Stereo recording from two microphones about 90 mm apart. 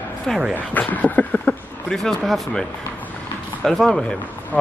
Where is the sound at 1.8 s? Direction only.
5° left (ahead or behind).